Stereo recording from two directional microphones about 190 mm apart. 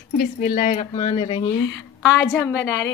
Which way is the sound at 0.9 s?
25° left (ahead or behind).